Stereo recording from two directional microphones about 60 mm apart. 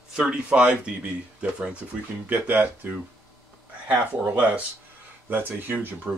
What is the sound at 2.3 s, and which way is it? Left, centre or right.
Speech, right.